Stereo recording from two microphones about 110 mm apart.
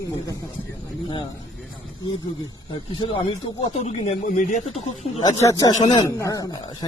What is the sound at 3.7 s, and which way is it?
Speech, 75° left (ahead or behind).